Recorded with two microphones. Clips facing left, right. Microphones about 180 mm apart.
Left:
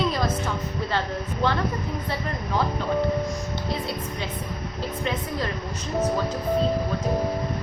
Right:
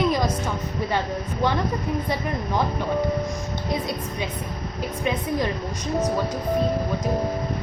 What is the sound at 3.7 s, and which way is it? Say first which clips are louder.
Speech: right 4 dB; 15° right (ahead or behind).